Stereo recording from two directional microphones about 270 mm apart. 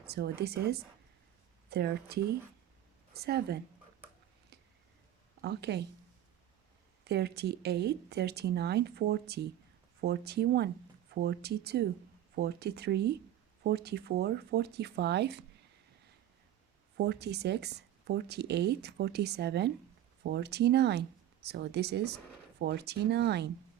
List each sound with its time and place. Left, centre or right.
0.0 s speech: right
5.4 s speech: right
7.0 s speech: right
17.0 s speech: right